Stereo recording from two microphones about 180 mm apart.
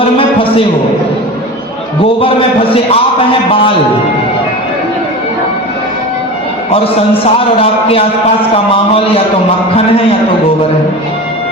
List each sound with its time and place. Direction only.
0.0 s a sound: 30° left (ahead or behind)
2.2 s a man's voice: 30° left (ahead or behind)
7.3 s a man's voice: 30° left (ahead or behind)